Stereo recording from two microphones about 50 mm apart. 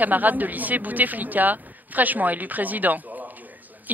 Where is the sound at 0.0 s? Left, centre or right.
Right.